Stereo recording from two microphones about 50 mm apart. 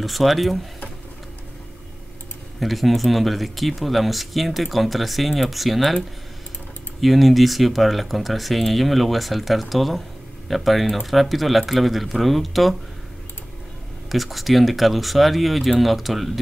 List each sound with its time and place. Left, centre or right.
0.0 s speech: centre
2.6 s speech: centre
7.0 s speech: centre
14.0 s speech: centre